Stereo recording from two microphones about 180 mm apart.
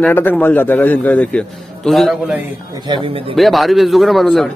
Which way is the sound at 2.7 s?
30° right (ahead or behind).